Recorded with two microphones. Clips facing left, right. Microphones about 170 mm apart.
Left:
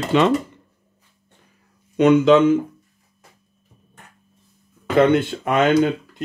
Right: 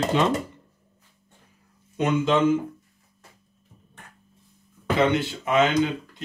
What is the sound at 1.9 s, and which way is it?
Speech, 80° left.